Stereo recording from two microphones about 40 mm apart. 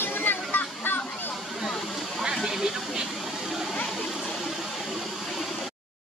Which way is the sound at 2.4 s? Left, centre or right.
Centre.